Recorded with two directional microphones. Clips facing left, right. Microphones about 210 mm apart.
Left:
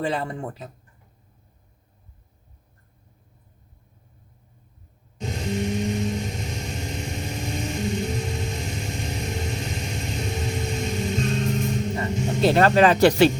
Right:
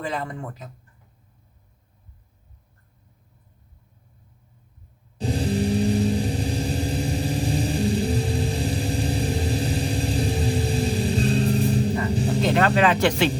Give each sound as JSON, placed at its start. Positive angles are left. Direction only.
{"t": 0.0, "sound": "speech", "side_deg": 30}
{"t": 5.1, "sound": "vehicle", "side_deg": -35}
{"t": 12.4, "sound": "speech", "side_deg": 35}